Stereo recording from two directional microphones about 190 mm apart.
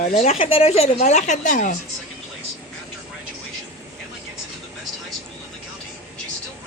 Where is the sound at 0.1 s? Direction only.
35° left (ahead or behind).